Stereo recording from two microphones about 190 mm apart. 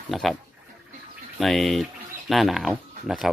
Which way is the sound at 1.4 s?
Centre (ahead or behind).